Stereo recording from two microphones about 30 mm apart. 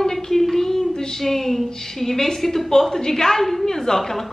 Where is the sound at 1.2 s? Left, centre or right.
Centre.